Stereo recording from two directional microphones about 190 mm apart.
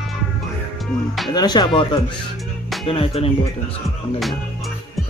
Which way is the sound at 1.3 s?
20° left (ahead or behind).